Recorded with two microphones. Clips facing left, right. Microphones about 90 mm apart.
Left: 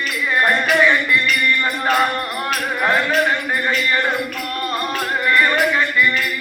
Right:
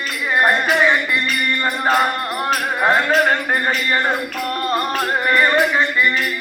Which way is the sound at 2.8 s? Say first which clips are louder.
Right 2 dB; 30° right (ahead or behind).